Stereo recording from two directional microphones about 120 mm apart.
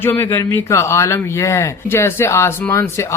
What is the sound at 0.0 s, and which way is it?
Speech, 20° left (ahead or behind).